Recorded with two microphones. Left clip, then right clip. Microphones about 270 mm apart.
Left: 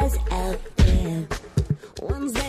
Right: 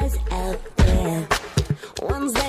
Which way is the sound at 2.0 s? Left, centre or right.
Centre.